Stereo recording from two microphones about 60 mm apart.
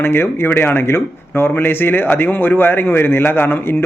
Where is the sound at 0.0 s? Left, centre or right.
Left.